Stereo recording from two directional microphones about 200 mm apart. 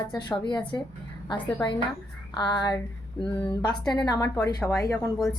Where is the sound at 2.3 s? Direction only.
20° left (ahead or behind).